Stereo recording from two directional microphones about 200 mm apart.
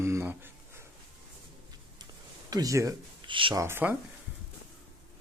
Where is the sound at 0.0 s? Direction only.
15° right (ahead or behind).